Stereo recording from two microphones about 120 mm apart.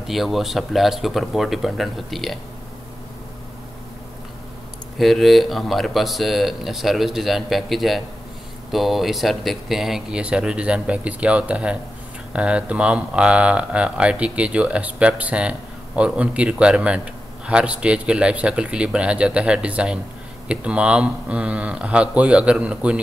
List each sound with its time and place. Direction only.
0.0 s speech: centre (ahead or behind)
4.9 s a man's voice: centre (ahead or behind)